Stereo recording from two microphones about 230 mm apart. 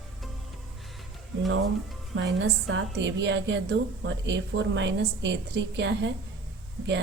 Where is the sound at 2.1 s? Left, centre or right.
Right.